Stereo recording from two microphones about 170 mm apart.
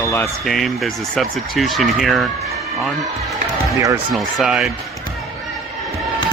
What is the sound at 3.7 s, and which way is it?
Speech, 20° right (ahead or behind).